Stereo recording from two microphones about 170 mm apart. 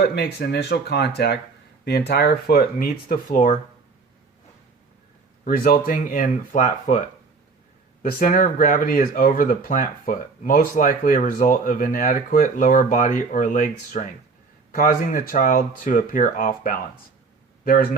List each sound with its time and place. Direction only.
0.0 s speech: 70° left (ahead or behind); by 3.6 s 50° left (ahead or behind)
5.5 s speech: 60° left (ahead or behind)
8.0 s speech: 55° left (ahead or behind)